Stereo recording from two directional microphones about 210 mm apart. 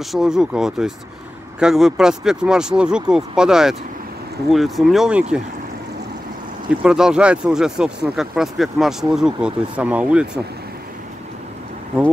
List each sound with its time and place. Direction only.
0.1 s speech: centre (ahead or behind)
6.8 s speech: 5° right (ahead or behind)